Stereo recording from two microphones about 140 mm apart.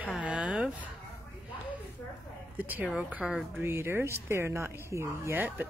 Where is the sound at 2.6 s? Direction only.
10° right (ahead or behind).